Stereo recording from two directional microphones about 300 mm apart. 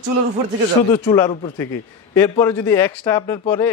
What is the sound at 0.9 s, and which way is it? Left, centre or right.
A man's voice, centre.